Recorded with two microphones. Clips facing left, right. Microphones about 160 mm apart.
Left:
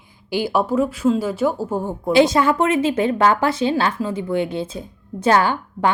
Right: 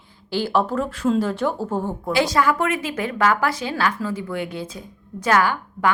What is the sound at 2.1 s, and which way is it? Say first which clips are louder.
A woman's voice: left 5 dB; 25° left (ahead or behind).